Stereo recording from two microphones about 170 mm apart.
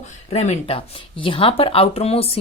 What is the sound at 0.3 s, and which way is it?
Speech, 40° left (ahead or behind).